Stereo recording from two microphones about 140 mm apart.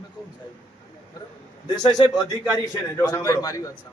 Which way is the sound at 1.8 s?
30° left (ahead or behind).